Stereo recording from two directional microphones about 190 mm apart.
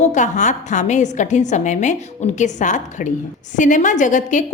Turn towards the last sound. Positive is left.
turn(degrees=40)  # may be behind; listen again after turning